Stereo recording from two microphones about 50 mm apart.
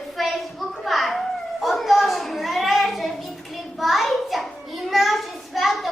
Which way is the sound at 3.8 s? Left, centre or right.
Centre.